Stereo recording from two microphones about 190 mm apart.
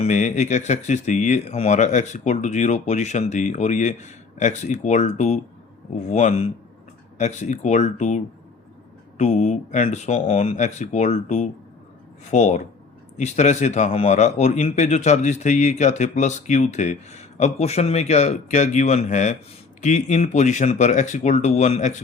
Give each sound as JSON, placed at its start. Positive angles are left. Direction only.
{"t": 0.0, "sound": "a man's voice", "side_deg": 40}